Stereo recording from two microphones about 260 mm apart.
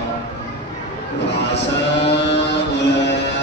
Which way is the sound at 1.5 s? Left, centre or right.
Left.